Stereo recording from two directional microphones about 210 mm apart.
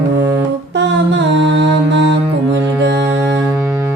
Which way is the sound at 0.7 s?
60° right (ahead or behind).